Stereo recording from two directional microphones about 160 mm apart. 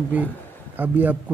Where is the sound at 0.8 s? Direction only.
10° right (ahead or behind).